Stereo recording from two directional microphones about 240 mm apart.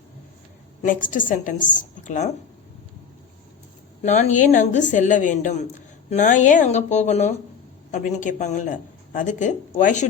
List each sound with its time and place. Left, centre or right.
0.8 s a woman's voice: left
4.0 s a woman's voice: left